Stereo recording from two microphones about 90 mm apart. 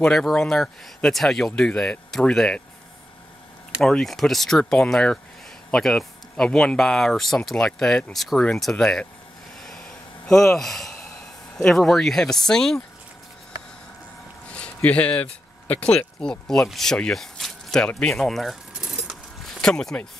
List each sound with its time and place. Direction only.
0.0 s speech: 5° left (ahead or behind)
3.8 s speech: 5° left (ahead or behind)
9.6 s a sound: 5° left (ahead or behind)
14.5 s a sound: 15° left (ahead or behind)
15.7 s speech: 15° left (ahead or behind); by 19.1 s 10° right (ahead or behind)
19.6 s speech: 5° left (ahead or behind)